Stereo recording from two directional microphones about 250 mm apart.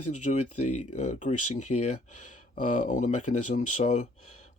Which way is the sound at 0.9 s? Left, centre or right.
Left.